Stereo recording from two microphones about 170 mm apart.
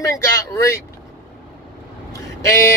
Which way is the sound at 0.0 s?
15° left (ahead or behind).